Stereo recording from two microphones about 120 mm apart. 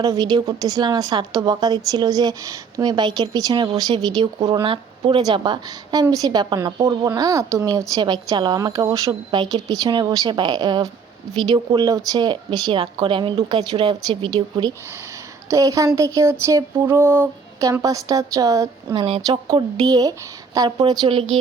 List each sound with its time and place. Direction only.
0.0 s a woman's voice: 30° right (ahead or behind)
4.6 s a woman's voice: 45° right (ahead or behind)
7.2 s a woman's voice: 25° right (ahead or behind)
15.4 s a woman's voice: 30° right (ahead or behind)
16.0 s a sound: 25° right (ahead or behind)
18.9 s speech: 50° right (ahead or behind)
19.5 s a woman's voice: 30° right (ahead or behind)